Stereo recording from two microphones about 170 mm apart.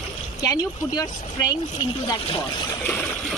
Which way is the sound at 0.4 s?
20° left (ahead or behind).